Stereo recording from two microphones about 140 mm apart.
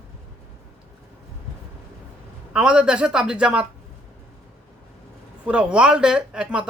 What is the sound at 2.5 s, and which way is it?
A man's voice, 5° right (ahead or behind).